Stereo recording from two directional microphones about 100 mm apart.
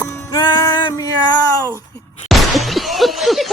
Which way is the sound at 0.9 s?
35° left (ahead or behind).